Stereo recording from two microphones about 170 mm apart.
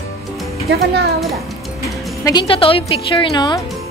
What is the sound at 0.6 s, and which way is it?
Speech, 70° right (ahead or behind).